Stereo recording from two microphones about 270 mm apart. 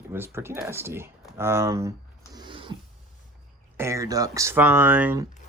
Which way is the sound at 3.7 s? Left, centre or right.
Centre.